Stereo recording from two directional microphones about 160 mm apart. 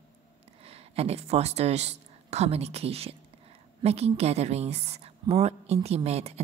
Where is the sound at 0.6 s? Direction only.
40° right (ahead or behind).